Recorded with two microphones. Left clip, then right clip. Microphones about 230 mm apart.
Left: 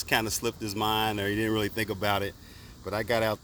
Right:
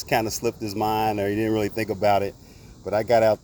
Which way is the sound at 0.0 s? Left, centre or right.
Centre.